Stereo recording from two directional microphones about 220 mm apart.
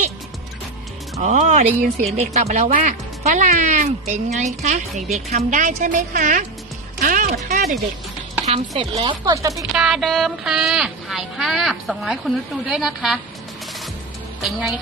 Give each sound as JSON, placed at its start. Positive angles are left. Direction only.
{"t": 1.2, "sound": "speech", "side_deg": -30}
{"t": 7.0, "sound": "music", "side_deg": -40}
{"t": 7.4, "sound": "speech", "side_deg": -40}
{"t": 8.4, "sound": "speech", "side_deg": -30}
{"t": 9.7, "sound": "speech", "side_deg": 0}
{"t": 14.4, "sound": "speech", "side_deg": 0}